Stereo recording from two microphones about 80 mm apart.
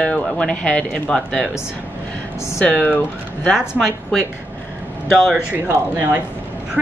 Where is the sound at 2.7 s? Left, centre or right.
Centre.